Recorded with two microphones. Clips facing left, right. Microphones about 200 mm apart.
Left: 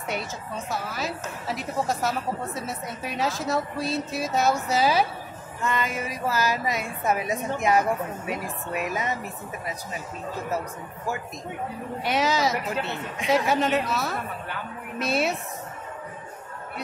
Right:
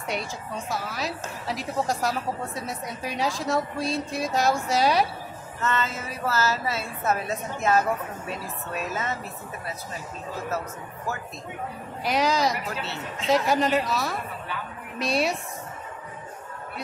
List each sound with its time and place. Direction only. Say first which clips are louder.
0.1 s a woman's voice: even; centre (ahead or behind)
5.6 s a woman's voice: left 1 dB; 15° left (ahead or behind)
12.0 s a woman's voice: right 1 dB; centre (ahead or behind)
12.6 s a woman's voice: left 3 dB; 15° left (ahead or behind)
13.5 s a woman's voice: even; centre (ahead or behind)